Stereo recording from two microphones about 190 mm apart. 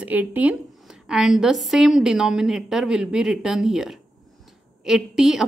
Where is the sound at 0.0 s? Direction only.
10° right (ahead or behind).